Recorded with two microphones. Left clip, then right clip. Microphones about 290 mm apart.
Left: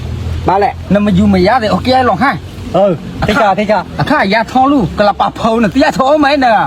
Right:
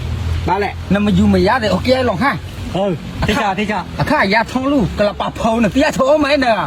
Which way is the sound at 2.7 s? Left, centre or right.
Left.